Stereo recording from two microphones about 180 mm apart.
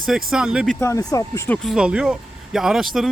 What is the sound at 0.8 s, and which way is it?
Speech, 15° left (ahead or behind).